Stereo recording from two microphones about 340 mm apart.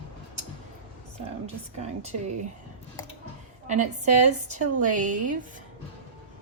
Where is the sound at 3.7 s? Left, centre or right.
Right.